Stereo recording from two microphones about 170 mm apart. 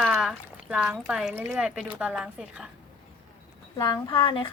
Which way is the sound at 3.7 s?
25° left (ahead or behind).